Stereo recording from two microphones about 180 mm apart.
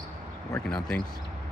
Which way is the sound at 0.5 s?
5° left (ahead or behind).